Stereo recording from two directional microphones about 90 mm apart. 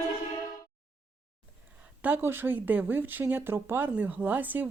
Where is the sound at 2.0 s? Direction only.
20° right (ahead or behind).